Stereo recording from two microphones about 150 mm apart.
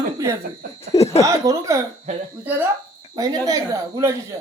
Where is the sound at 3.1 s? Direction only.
25° right (ahead or behind).